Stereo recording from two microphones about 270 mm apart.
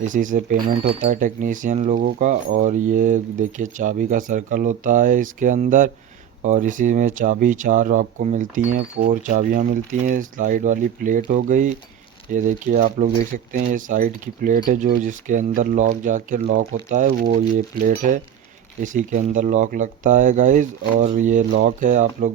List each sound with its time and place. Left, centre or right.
0.0 s speech: right